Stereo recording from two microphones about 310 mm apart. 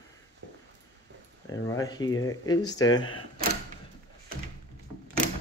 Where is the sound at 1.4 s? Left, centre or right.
Centre.